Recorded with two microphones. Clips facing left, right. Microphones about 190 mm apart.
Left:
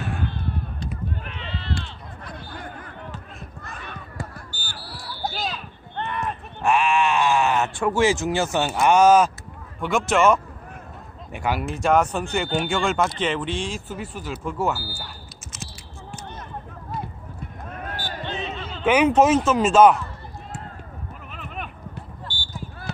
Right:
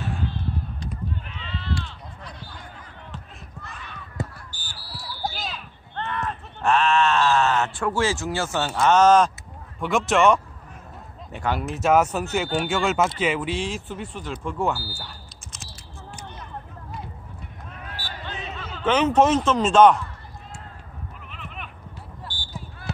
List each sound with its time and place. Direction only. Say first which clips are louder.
0.1 s a sound: left 1 dB; 60° left (ahead or behind)
1.2 s run: left 2 dB; 65° left (ahead or behind)
2.2 s a sound: left 7 dB; 55° left (ahead or behind)
4.6 s basketball bounce: left 2 dB; 60° left (ahead or behind)
5.2 s a sound: left 3 dB; centre (ahead or behind)
5.9 s speech: left 1 dB; 15° left (ahead or behind)
11.7 s speech: right 1 dB; 5° right (ahead or behind)
17.6 s basketball bounce: left 6 dB; 50° left (ahead or behind)
18.2 s basketball bounce: left 4 dB; 25° left (ahead or behind)
18.9 s speech: left 2 dB; 10° left (ahead or behind)
21.3 s sheep: left 6 dB; 45° left (ahead or behind)
22.3 s basketball bounce: left 2 dB; 30° left (ahead or behind)